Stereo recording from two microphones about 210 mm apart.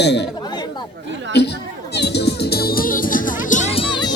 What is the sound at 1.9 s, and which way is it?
Music, 50° left (ahead or behind).